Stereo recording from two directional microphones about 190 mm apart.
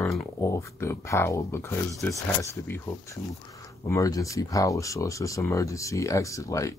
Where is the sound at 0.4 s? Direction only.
15° left (ahead or behind).